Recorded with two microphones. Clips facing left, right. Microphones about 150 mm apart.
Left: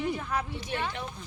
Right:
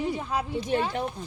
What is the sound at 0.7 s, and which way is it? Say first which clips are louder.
Speech: right 8 dB; 35° right (ahead or behind).